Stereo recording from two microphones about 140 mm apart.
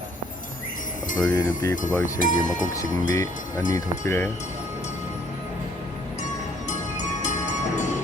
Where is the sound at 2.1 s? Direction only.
70° left (ahead or behind).